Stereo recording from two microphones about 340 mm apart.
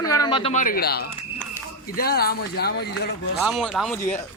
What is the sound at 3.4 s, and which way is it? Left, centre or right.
Speech, centre.